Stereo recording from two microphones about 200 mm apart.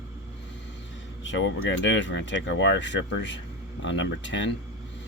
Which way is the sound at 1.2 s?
65° left (ahead or behind).